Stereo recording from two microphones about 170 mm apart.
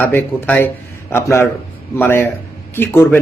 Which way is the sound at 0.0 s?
10° left (ahead or behind).